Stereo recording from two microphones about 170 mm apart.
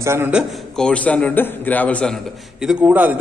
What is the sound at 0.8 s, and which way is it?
A man's voice, 5° left (ahead or behind).